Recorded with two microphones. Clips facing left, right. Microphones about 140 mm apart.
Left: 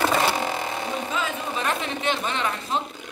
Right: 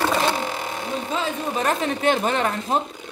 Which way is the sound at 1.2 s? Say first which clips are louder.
Right 3 dB; 35° right (ahead or behind).